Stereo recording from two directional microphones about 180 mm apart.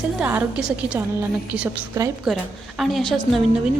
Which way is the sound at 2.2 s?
Centre (ahead or behind).